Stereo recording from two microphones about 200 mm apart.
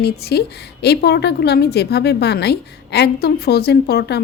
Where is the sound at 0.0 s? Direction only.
55° left (ahead or behind).